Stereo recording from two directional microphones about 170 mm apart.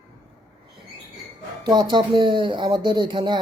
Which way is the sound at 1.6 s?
25° right (ahead or behind).